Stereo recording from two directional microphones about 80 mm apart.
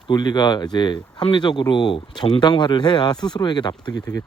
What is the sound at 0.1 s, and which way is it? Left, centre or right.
Speech, left.